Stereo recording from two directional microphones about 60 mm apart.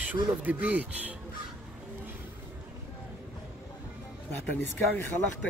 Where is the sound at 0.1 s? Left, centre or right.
Right.